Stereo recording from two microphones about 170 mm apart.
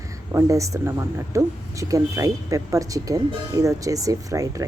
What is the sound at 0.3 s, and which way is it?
Speech, 20° right (ahead or behind).